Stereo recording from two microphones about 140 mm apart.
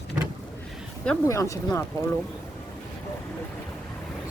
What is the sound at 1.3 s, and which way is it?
Speech, 25° left (ahead or behind).